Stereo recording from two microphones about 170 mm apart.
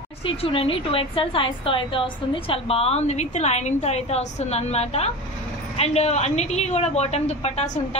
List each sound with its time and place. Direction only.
0.2 s a woman's voice: 35° left (ahead or behind)